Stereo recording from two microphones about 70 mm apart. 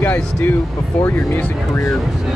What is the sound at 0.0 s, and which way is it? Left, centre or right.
Speech, left.